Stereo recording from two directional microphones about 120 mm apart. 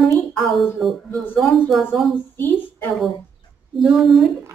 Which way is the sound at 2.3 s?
15° left (ahead or behind).